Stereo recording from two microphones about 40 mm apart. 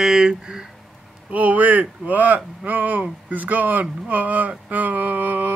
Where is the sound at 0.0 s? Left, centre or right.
Centre.